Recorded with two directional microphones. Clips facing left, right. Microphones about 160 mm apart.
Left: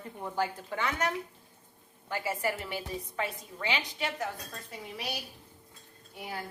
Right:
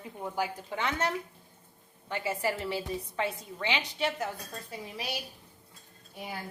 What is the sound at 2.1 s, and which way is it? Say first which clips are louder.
A woman's voice: right 1 dB; 25° right (ahead or behind).